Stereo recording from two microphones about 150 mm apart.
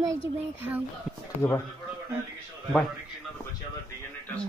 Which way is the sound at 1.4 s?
20° left (ahead or behind).